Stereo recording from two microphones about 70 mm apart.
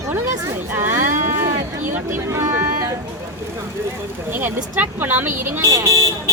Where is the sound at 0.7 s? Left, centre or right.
Right.